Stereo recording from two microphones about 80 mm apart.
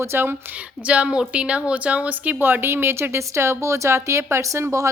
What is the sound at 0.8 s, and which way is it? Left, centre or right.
A woman's voice, centre.